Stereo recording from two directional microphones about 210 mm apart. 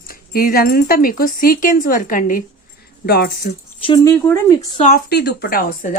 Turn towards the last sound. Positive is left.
turn(degrees=40)  # may be behind; listen again after turning